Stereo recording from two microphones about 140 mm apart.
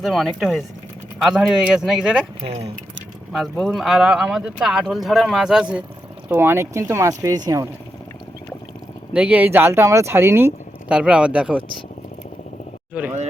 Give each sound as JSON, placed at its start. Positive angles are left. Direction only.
{"t": 0.0, "sound": "speech", "side_deg": 0}
{"t": 2.4, "sound": "speech", "side_deg": -50}
{"t": 3.3, "sound": "speech", "side_deg": 0}
{"t": 9.1, "sound": "speech", "side_deg": -10}
{"t": 12.9, "sound": "speech", "side_deg": -10}